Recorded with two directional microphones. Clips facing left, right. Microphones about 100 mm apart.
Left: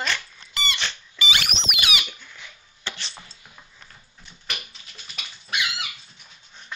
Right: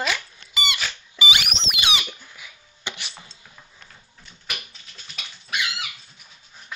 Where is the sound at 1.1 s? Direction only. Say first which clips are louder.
Right 2 dB; 20° right (ahead or behind).